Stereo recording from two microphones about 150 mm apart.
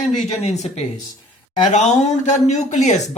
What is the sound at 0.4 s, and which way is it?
Speech, 50° left (ahead or behind).